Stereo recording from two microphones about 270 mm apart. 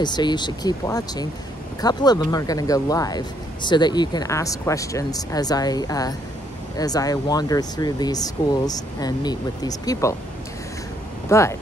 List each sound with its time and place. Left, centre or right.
0.0 s speech: centre
11.2 s speech: centre